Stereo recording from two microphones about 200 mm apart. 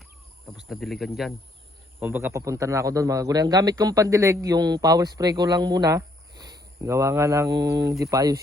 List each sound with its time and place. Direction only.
0.4 s speech: centre (ahead or behind)
2.0 s a man's voice: 10° right (ahead or behind)